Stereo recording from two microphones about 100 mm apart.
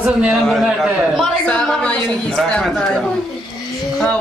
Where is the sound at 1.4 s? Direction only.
5° left (ahead or behind).